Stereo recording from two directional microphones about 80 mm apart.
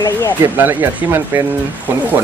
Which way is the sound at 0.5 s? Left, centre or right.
Right.